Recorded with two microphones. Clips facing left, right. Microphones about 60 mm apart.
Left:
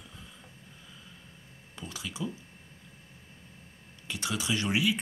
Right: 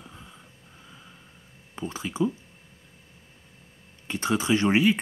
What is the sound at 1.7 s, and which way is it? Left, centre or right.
Speech, right.